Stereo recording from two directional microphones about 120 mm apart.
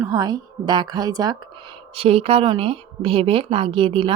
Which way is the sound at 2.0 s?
55° right (ahead or behind).